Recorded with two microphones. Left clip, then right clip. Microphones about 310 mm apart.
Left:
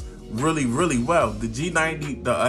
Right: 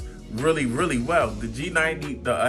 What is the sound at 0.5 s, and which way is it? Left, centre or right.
A man's voice, centre.